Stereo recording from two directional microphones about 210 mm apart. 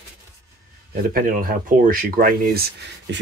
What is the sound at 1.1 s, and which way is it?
Speech, 40° right (ahead or behind).